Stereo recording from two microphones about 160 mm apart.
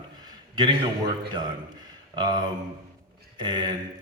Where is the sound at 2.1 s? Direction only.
25° right (ahead or behind).